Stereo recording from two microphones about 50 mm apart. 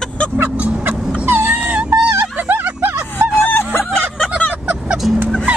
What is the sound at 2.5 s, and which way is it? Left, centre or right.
Music, right.